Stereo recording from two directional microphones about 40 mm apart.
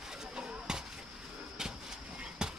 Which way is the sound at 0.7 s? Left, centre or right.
Centre.